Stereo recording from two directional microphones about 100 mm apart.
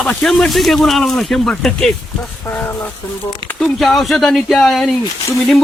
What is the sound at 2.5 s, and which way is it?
Speech, 20° left (ahead or behind).